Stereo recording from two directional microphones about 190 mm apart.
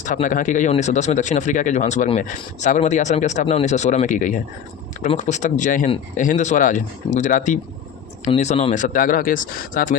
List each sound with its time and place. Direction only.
0.0 s speech: 45° left (ahead or behind)